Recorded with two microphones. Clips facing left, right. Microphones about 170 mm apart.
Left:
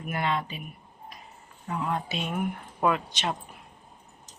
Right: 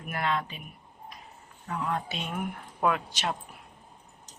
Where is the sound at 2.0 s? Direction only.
5° left (ahead or behind).